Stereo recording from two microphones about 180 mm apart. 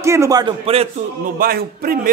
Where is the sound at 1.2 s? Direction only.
55° right (ahead or behind).